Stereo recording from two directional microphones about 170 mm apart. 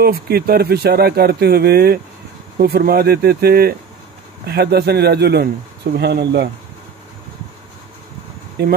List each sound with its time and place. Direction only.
0.0 s speech: 65° right (ahead or behind)
8.6 s speech: 75° right (ahead or behind)